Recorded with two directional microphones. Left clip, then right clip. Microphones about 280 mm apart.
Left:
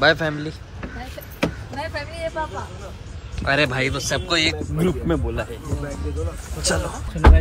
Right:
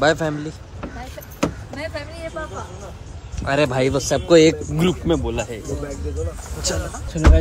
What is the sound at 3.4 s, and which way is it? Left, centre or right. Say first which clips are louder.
Speech: right 1 dB; centre.